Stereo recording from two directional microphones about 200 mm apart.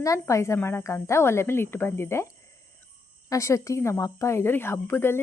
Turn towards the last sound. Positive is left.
turn(degrees=10)  # may be behind; listen again after turning